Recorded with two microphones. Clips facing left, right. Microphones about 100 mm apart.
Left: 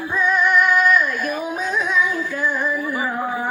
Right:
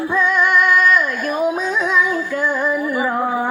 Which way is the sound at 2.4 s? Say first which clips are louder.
Right 2 dB; 90° right.